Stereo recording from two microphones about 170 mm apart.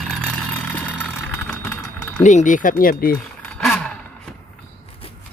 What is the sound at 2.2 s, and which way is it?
Speech, 45° left (ahead or behind).